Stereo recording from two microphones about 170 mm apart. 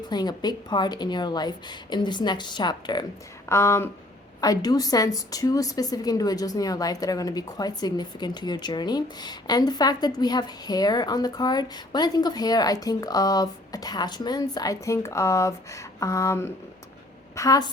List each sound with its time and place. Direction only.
0.1 s a woman's voice: 25° left (ahead or behind)
3.5 s a woman's voice: 15° left (ahead or behind)